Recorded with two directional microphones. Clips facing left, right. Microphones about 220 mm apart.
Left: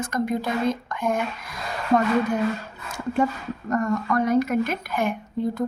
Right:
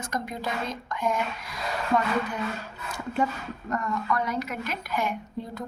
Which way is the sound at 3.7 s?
45° left (ahead or behind).